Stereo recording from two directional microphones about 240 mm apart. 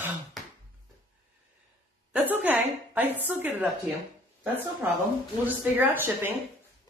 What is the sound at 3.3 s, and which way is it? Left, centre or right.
Speech, centre.